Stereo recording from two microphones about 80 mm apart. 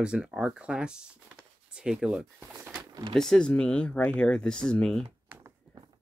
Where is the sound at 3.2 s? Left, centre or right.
Centre.